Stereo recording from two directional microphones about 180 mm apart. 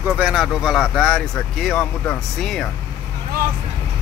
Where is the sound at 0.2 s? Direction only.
5° right (ahead or behind).